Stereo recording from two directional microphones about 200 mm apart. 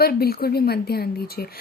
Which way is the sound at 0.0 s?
50° left (ahead or behind).